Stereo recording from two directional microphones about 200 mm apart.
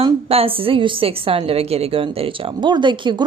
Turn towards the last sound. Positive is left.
turn(degrees=-25)  # may be behind; listen again after turning